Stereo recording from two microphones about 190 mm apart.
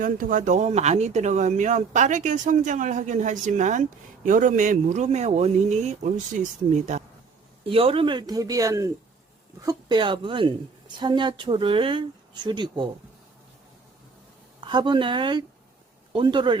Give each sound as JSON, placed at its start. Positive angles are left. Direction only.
{"t": 0.0, "sound": "a woman's voice", "side_deg": -45}
{"t": 14.6, "sound": "a woman's voice", "side_deg": -25}